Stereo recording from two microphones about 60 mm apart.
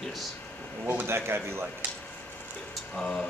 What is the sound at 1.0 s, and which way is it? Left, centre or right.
Speech, right.